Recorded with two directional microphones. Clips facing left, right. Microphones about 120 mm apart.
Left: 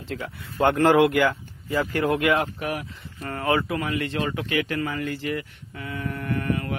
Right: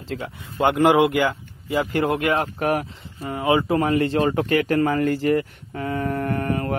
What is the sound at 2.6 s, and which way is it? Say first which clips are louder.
Speech: right 7 dB; 50° right (ahead or behind).